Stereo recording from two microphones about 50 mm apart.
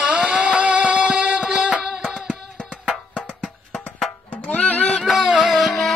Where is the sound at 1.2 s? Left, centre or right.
Centre.